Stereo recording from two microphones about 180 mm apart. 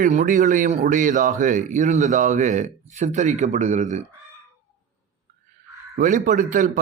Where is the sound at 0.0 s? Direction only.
50° right (ahead or behind).